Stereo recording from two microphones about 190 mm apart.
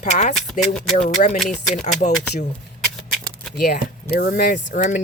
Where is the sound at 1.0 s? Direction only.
40° left (ahead or behind).